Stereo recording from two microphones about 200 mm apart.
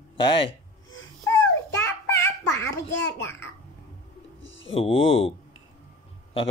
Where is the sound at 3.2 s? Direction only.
10° left (ahead or behind).